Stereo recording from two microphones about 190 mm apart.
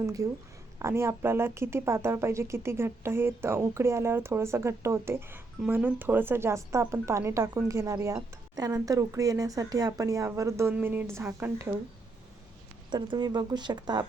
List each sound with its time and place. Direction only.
0.0 s speech: 20° right (ahead or behind)
12.9 s speech: 25° right (ahead or behind)